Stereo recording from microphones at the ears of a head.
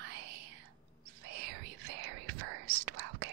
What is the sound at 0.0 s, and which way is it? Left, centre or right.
Whispering, right.